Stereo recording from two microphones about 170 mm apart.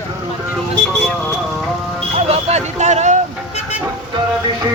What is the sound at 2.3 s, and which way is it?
Speech, 40° right (ahead or behind).